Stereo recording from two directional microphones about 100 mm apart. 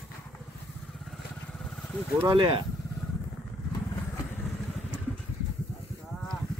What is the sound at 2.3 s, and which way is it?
Speech, 55° right (ahead or behind).